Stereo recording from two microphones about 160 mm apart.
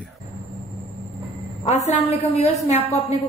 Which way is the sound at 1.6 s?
45° left (ahead or behind).